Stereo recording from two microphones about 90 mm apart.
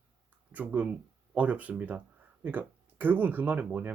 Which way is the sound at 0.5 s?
15° right (ahead or behind).